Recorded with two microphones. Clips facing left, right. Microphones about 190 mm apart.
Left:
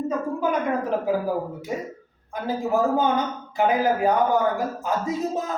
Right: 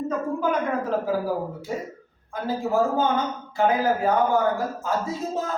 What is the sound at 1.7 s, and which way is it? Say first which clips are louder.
Speech: left 1 dB; 20° left (ahead or behind).